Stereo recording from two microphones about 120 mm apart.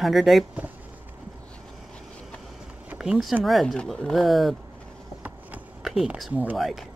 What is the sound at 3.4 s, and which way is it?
Speech, centre (ahead or behind).